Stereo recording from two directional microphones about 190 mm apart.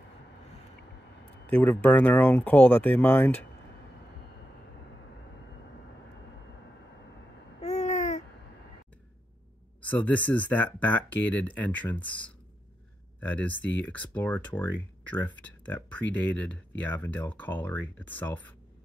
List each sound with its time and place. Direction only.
1.5 s speech: 10° left (ahead or behind)
7.6 s babbling: 35° left (ahead or behind)
9.8 s speech: 10° left (ahead or behind)
13.2 s speech: 10° left (ahead or behind)